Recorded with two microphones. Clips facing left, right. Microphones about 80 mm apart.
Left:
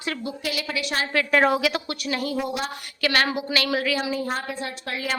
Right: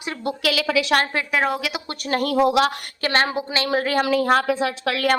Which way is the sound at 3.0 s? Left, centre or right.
Right.